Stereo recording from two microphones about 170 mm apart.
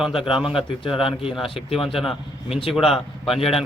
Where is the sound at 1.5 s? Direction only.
35° left (ahead or behind).